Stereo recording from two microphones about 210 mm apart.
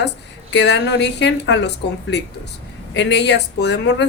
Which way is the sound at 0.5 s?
55° left (ahead or behind).